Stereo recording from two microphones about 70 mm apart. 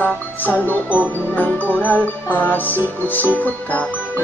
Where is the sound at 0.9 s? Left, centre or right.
Right.